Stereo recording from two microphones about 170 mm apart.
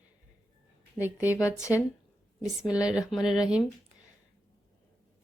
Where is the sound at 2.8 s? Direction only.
5° right (ahead or behind).